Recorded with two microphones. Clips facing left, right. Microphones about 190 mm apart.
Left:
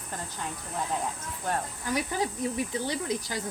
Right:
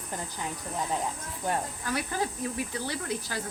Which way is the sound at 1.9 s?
15° left (ahead or behind).